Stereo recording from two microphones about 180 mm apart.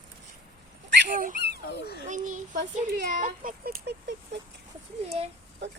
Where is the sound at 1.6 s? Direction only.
65° left (ahead or behind).